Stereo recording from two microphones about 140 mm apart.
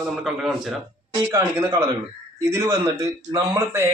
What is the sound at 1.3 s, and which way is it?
Speech, 20° right (ahead or behind).